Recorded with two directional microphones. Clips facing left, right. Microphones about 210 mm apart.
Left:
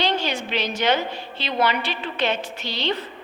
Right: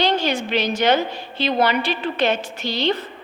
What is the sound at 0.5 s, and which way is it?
A woman's voice, 45° right (ahead or behind).